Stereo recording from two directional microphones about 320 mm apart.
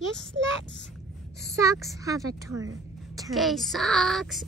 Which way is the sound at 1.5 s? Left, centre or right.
Centre.